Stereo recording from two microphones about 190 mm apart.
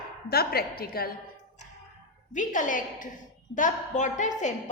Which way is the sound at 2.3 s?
45° left (ahead or behind).